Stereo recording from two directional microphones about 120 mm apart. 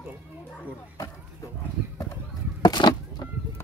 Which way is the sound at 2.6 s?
35° left (ahead or behind).